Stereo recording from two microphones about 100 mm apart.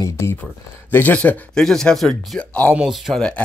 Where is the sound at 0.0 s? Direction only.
25° left (ahead or behind); by 2.7 s 10° left (ahead or behind).